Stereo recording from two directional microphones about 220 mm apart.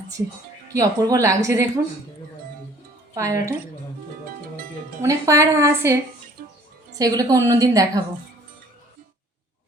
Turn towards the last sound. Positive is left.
turn(degrees=-15)  # may be behind; listen again after turning